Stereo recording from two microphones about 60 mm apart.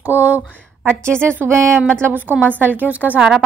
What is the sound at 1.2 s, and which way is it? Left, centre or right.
A woman's voice, right.